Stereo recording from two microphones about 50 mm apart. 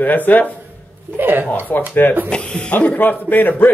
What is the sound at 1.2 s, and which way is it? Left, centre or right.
Speech, right.